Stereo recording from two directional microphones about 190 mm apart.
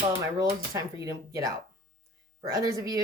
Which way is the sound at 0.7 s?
20° right (ahead or behind).